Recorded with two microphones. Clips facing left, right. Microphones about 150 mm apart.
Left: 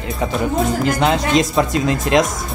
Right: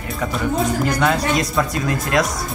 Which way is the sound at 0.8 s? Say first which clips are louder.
Left 2 dB; 25° left (ahead or behind).